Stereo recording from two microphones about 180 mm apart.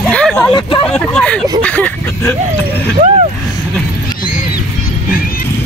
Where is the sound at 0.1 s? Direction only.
5° left (ahead or behind).